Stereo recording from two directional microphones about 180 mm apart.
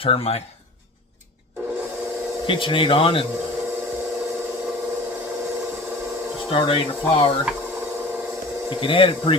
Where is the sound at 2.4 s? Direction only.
30° left (ahead or behind).